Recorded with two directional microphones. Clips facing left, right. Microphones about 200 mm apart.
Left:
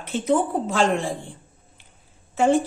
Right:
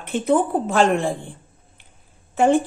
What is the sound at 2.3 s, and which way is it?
Speech, 55° right (ahead or behind).